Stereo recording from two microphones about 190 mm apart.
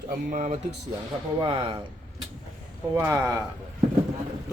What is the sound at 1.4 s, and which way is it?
Speech, 25° right (ahead or behind).